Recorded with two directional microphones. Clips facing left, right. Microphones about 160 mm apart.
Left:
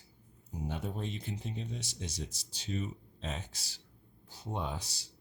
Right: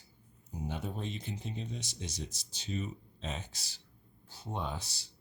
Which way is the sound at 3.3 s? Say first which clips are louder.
Even; 10° left (ahead or behind).